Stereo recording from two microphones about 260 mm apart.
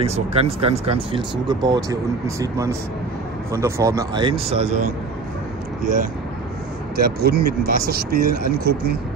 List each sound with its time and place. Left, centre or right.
0.0 s speech: right
7.0 s speech: right